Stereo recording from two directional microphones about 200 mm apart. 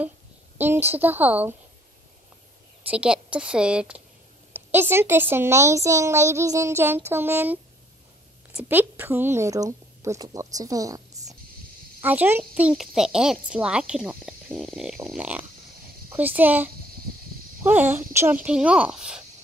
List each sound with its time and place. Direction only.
0.6 s a child's voice: 10° right (ahead or behind)
2.9 s a woman's voice: 5° right (ahead or behind)
8.5 s a woman's voice: 10° right (ahead or behind)